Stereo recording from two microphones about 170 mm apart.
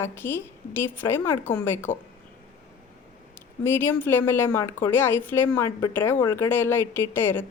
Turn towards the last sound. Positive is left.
turn(degrees=10)  # may be behind; listen again after turning